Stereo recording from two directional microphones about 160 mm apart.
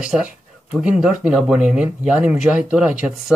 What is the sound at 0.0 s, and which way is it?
Speech, 5° right (ahead or behind).